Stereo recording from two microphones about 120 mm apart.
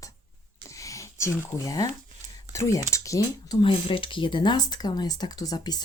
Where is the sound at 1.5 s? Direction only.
30° left (ahead or behind).